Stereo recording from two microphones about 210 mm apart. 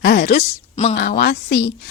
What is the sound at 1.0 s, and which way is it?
Speech, 50° left (ahead or behind).